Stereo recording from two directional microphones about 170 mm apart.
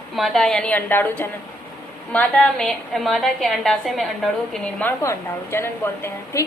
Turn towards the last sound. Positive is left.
turn(degrees=15)  # may be behind; listen again after turning